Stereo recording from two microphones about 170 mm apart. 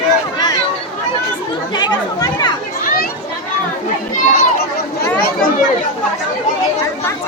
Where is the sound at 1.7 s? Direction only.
25° left (ahead or behind).